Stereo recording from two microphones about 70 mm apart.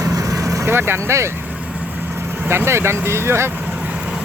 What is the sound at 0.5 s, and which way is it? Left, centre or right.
Speech, right.